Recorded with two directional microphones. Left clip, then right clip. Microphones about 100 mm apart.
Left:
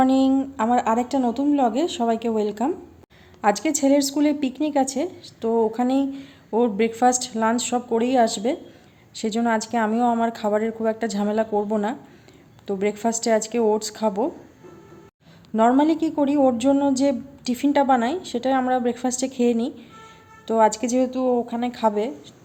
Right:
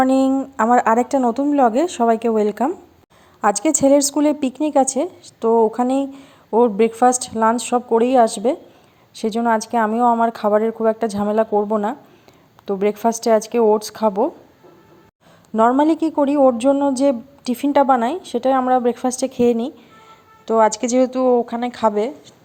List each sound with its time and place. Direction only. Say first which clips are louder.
0.0 s speech: right 3 dB; 65° right (ahead or behind)
1.5 s speech: right 5 dB; 65° right (ahead or behind)
3.4 s a woman's voice: right 4 dB; 80° right; by 14.3 s 40° right (ahead or behind)
15.8 s a woman's voice: right 4 dB; 60° right (ahead or behind); by 22.1 s 35° right (ahead or behind)